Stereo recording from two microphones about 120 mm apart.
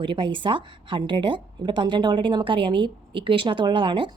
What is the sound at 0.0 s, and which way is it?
A woman's voice, 45° right (ahead or behind).